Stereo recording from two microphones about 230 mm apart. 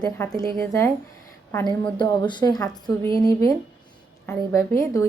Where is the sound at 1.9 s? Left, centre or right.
Centre.